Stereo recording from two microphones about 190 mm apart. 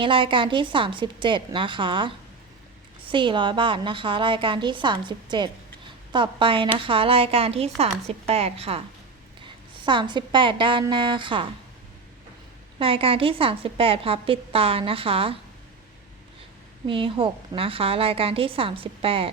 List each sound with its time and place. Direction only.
0.0 s a woman's voice: 25° right (ahead or behind)
9.8 s a woman's voice: 25° right (ahead or behind)
12.8 s a woman's voice: 30° right (ahead or behind)
16.8 s a woman's voice: 25° right (ahead or behind)